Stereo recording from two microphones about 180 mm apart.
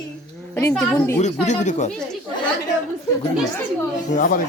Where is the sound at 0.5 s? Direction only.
10° left (ahead or behind).